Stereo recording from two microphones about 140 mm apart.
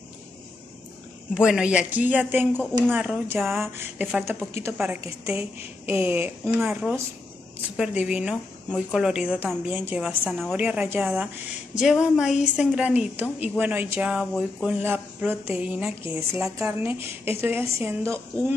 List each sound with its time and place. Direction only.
1.3 s a woman's voice: 5° right (ahead or behind)
3.7 s a woman's voice: 10° right (ahead or behind)
16.0 s a woman's voice: 20° right (ahead or behind)